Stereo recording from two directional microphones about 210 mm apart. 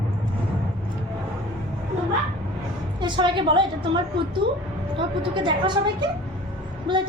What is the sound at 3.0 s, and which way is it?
A woman's voice, 20° right (ahead or behind).